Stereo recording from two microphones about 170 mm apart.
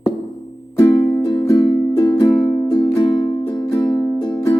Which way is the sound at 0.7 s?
15° left (ahead or behind).